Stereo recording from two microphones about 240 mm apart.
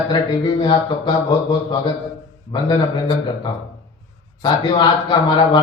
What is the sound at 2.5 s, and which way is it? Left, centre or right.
A man's voice, centre.